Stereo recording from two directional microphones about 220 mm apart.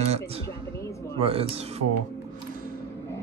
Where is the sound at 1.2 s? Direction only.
25° right (ahead or behind).